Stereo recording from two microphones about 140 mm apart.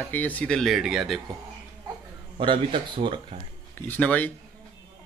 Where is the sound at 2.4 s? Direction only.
35° right (ahead or behind).